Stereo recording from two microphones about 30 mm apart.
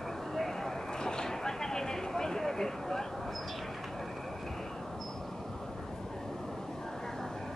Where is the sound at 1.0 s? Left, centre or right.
Left.